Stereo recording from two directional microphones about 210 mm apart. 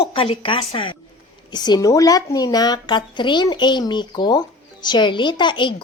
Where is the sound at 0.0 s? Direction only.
25° left (ahead or behind).